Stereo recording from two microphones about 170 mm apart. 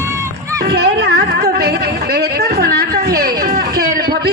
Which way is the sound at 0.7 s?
80° right.